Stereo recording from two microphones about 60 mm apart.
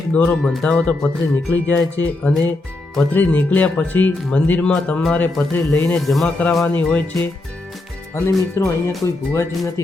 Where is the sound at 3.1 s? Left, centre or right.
Left.